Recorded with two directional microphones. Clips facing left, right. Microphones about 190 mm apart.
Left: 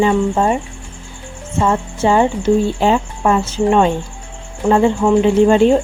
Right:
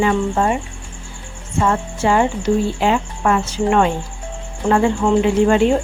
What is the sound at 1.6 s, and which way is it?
Speech, 20° left (ahead or behind).